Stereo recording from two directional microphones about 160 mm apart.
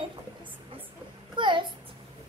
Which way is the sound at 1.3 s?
30° right (ahead or behind).